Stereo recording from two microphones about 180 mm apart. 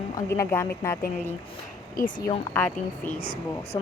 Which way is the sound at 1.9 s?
55° left (ahead or behind).